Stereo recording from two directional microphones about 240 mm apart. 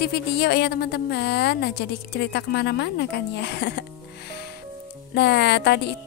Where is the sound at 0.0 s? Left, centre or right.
Left.